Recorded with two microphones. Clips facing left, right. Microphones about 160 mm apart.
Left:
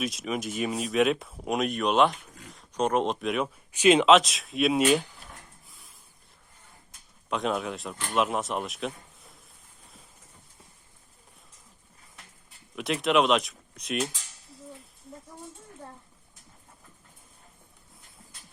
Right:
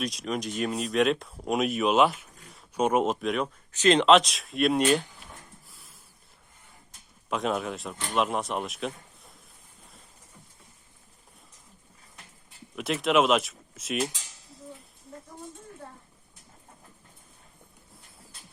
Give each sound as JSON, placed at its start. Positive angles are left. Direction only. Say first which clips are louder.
{"t": 0.0, "sound": "speech", "louder": "even", "side_deg": 0}
{"t": 5.6, "sound": "a sound", "louder": "right 1 dB", "side_deg": 0}
{"t": 7.3, "sound": "speech", "louder": "even", "side_deg": 0}
{"t": 12.7, "sound": "speech", "louder": "even", "side_deg": 0}